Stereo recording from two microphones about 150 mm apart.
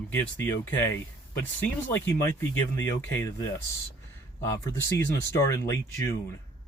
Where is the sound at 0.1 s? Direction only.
15° left (ahead or behind).